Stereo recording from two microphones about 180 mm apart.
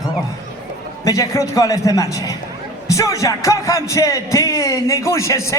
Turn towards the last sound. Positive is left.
turn(degrees=15)  # may be behind; listen again after turning